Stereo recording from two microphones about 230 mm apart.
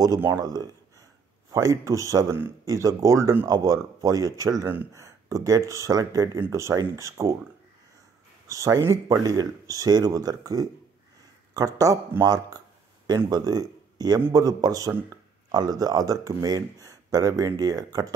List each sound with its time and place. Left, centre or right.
0.0 s speech: centre
8.5 s speech: centre